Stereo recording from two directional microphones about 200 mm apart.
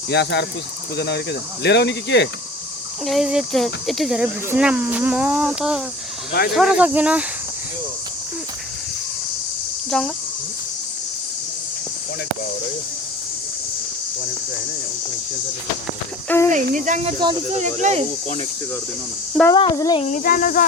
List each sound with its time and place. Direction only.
0.1 s speech: 60° left (ahead or behind)
3.1 s speech: centre (ahead or behind)
9.9 s speech: 5° left (ahead or behind)
16.3 s speech: 10° left (ahead or behind)
16.6 s speech: 40° right (ahead or behind)
19.5 s speech: 20° left (ahead or behind)
20.0 s speech: 40° left (ahead or behind)